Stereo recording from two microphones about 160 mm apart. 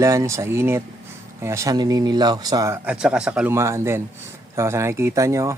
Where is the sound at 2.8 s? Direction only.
5° right (ahead or behind).